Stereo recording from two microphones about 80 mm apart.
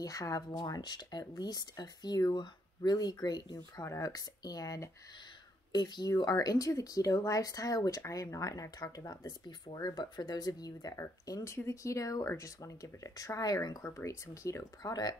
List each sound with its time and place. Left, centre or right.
0.0 s speech: left
0.5 s speech: left
3.8 s speech: left
5.7 s speech: left
13.9 s speech: left